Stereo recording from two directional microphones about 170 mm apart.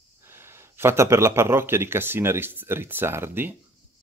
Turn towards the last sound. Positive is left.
turn(degrees=-15)  # may be behind; listen again after turning